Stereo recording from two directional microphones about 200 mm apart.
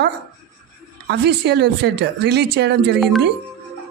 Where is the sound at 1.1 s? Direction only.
55° right (ahead or behind).